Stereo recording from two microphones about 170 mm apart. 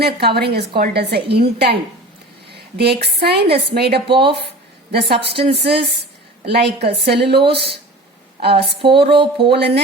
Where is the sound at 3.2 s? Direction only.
75° right (ahead or behind).